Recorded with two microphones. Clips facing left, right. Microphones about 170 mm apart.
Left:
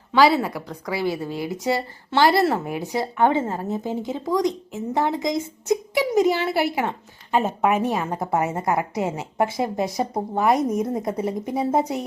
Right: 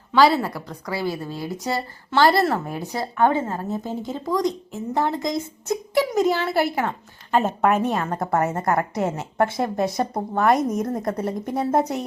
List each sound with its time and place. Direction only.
0.1 s a woman's voice: 15° left (ahead or behind)